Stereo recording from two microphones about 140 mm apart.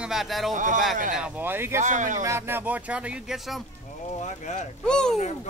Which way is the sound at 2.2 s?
20° right (ahead or behind).